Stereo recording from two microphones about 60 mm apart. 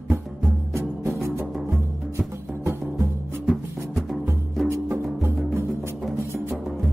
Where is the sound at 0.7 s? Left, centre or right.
Right.